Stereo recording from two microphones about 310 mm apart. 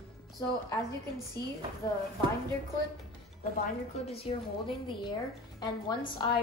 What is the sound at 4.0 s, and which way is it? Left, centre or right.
A woman's voice, centre.